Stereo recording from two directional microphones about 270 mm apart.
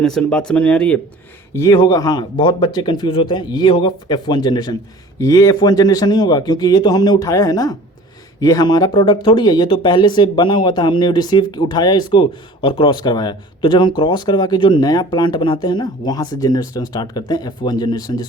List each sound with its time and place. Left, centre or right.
0.0 s speech: centre